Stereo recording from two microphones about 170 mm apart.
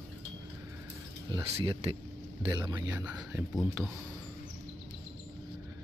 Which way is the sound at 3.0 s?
10° right (ahead or behind).